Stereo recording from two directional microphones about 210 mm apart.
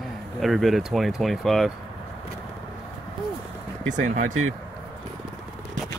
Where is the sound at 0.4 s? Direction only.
Centre (ahead or behind).